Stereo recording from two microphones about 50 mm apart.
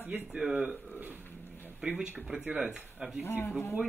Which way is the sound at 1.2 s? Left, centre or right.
Left.